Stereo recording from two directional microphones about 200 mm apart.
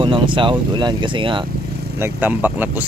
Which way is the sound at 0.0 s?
25° right (ahead or behind).